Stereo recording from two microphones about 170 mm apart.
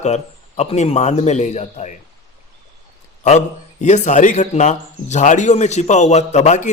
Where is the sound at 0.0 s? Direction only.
40° left (ahead or behind).